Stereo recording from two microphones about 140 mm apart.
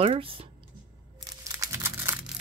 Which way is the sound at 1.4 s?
20° right (ahead or behind).